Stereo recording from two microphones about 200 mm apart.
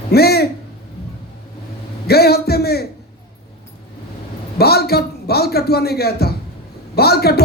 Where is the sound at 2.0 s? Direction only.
50° left (ahead or behind).